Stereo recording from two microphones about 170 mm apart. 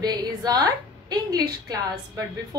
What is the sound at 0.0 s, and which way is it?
A woman's voice, 25° right (ahead or behind).